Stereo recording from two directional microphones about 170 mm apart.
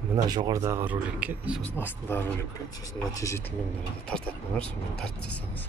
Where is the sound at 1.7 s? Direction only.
10° left (ahead or behind).